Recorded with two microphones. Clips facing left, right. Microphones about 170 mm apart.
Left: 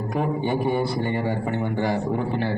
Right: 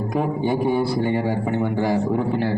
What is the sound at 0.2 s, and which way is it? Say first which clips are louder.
A man's voice: right 2 dB; 5° right (ahead or behind).